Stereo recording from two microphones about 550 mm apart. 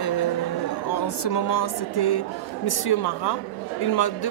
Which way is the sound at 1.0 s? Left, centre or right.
Left.